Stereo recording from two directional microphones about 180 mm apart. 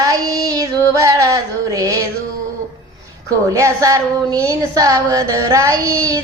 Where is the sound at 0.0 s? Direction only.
20° right (ahead or behind).